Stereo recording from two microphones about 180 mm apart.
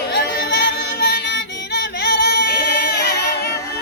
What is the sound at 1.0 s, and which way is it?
Yodeling, 65° left (ahead or behind).